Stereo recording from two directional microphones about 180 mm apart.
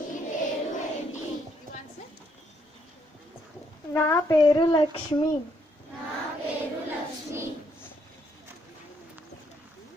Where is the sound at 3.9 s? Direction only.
15° left (ahead or behind).